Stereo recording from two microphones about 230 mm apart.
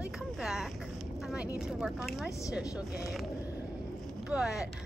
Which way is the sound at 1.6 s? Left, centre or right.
Centre.